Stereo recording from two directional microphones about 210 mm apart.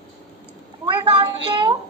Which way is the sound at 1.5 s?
20° right (ahead or behind).